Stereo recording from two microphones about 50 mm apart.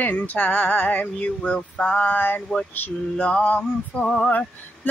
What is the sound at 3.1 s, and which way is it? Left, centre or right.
Music, left.